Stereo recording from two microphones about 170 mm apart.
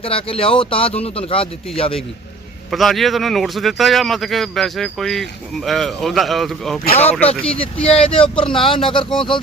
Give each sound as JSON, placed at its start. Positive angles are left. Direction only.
{"t": 0.0, "sound": "speech", "side_deg": 35}
{"t": 2.6, "sound": "a man's voice", "side_deg": 0}
{"t": 8.1, "sound": "speech", "side_deg": 30}